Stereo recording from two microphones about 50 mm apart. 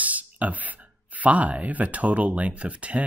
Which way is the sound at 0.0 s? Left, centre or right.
Right.